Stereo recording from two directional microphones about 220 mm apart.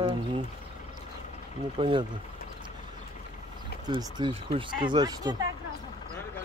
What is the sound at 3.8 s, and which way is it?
Speech, 20° right (ahead or behind).